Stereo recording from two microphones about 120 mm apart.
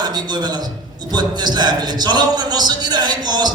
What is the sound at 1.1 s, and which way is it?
A man's voice, 35° right (ahead or behind).